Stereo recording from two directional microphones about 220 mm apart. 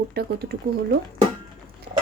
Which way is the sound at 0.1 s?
45° right (ahead or behind).